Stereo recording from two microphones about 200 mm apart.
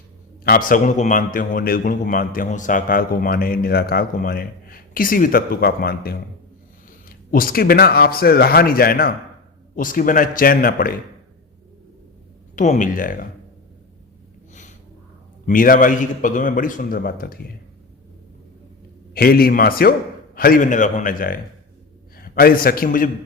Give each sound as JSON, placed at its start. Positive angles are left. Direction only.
{"t": 0.4, "sound": "a man's voice", "side_deg": 45}
{"t": 12.5, "sound": "speech", "side_deg": 40}
{"t": 15.4, "sound": "a man's voice", "side_deg": 45}
{"t": 19.1, "sound": "a man's voice", "side_deg": 50}